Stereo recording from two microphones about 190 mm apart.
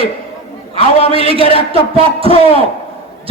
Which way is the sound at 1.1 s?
30° right (ahead or behind).